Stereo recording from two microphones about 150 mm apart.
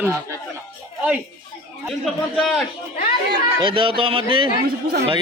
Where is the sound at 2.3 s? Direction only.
5° left (ahead or behind).